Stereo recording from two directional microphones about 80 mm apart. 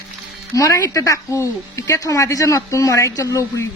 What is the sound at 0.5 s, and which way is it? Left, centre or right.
Speech, left.